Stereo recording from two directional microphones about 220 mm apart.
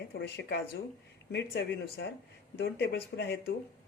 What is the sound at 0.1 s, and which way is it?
Speech, 50° left (ahead or behind).